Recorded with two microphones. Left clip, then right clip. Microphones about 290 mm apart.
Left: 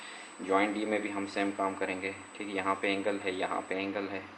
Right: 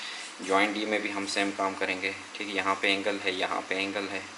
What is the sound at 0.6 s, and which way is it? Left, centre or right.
Speech, centre.